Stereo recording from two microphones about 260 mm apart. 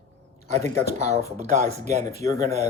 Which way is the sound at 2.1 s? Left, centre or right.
Centre.